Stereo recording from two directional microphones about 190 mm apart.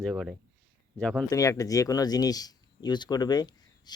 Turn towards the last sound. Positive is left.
turn(degrees=20)  # may be behind; listen again after turning